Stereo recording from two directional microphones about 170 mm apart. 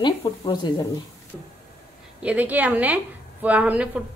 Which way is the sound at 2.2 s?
10° right (ahead or behind).